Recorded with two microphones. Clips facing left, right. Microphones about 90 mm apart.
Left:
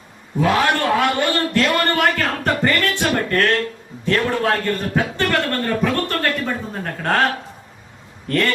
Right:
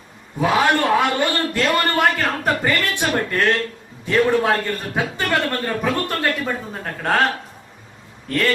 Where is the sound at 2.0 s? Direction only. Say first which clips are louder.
Even; 5° right (ahead or behind).